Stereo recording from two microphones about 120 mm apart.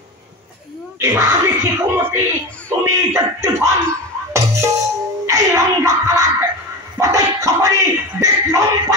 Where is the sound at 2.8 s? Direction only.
25° right (ahead or behind).